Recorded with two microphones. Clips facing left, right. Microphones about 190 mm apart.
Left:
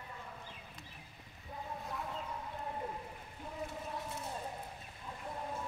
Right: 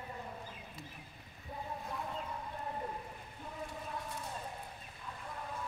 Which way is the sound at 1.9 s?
Centre (ahead or behind).